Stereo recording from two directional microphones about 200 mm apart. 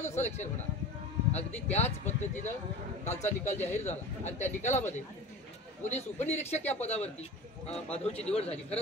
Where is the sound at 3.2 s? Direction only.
35° left (ahead or behind).